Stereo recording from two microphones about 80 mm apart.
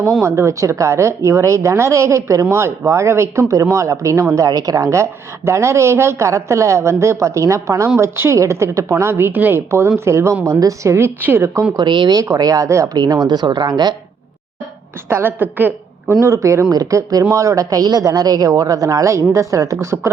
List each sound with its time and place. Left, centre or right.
0.2 s a woman's voice: right
9.6 s a woman's voice: right
11.8 s speech: right
12.1 s speech: right
15.1 s a woman's voice: right
16.2 s speech: right